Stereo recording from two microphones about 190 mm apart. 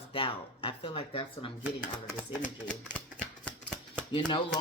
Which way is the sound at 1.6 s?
Centre (ahead or behind).